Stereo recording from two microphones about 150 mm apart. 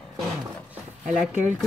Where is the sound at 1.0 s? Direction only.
55° right (ahead or behind).